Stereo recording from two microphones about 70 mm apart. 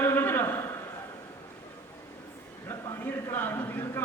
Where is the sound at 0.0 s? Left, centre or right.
Left.